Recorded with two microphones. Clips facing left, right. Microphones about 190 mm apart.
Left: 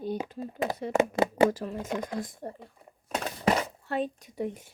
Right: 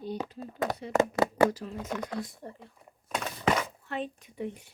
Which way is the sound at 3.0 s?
35° left (ahead or behind).